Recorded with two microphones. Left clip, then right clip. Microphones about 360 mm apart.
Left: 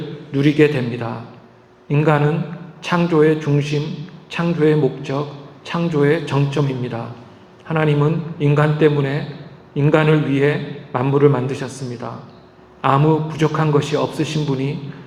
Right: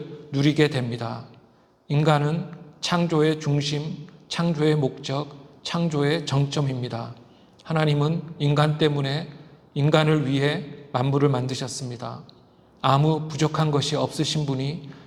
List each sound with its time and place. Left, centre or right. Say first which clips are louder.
0.3 s a man's voice: left 7 dB; right